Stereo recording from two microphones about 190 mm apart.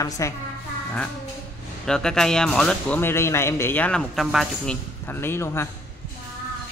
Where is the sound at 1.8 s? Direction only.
5° left (ahead or behind).